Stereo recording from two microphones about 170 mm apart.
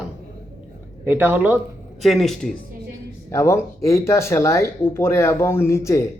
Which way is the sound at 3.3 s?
15° left (ahead or behind).